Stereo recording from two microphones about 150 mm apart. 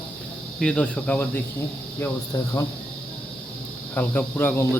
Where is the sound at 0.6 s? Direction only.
5° left (ahead or behind).